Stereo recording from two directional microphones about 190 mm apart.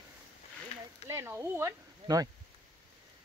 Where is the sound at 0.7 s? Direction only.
35° left (ahead or behind).